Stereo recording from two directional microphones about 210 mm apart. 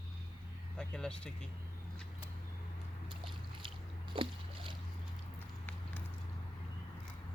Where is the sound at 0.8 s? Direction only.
5° left (ahead or behind).